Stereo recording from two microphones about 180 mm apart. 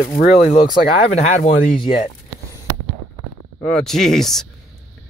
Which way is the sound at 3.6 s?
5° left (ahead or behind).